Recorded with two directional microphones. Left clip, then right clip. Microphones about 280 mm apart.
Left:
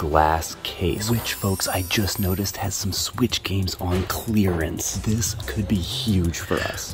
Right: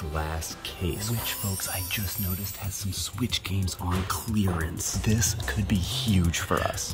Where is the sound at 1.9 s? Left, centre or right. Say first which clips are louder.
Left 9 dB; centre.